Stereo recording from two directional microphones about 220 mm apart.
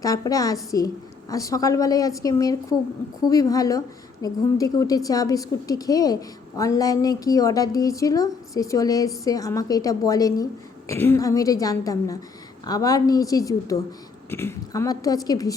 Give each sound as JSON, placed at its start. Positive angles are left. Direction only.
{"t": 0.0, "sound": "a woman's voice", "side_deg": 15}